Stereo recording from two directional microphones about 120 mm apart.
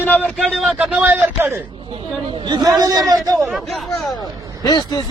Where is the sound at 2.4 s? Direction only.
35° right (ahead or behind).